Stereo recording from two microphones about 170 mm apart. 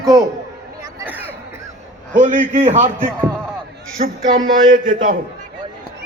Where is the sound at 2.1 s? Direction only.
50° right (ahead or behind).